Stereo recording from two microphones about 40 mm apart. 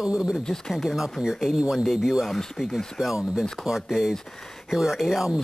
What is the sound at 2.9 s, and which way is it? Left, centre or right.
Speech, centre.